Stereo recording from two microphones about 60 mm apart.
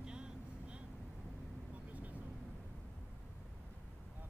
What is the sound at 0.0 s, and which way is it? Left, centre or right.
Vehicle, centre.